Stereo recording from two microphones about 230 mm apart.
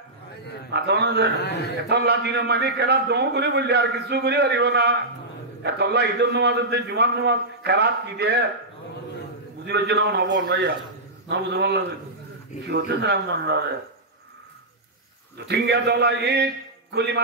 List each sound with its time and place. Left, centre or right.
0.7 s a man's voice: right
9.7 s a man's voice: right
15.3 s a man's voice: right